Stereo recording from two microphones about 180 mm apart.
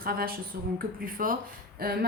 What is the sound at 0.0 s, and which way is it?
A woman's voice, 55° right (ahead or behind).